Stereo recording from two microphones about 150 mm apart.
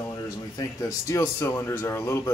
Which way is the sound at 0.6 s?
20° left (ahead or behind).